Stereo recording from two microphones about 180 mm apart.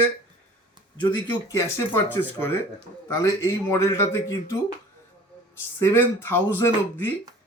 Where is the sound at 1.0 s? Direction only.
20° left (ahead or behind).